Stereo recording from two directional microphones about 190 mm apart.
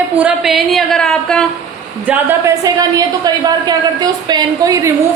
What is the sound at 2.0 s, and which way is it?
A woman's voice, 10° right (ahead or behind).